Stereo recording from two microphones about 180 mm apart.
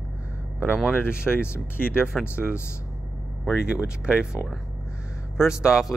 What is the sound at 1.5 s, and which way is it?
Speech, 10° left (ahead or behind).